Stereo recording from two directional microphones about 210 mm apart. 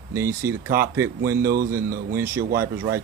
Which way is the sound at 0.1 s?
10° right (ahead or behind).